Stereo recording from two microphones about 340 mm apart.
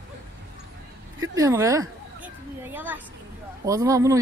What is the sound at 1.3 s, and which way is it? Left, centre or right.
A woman's voice, centre.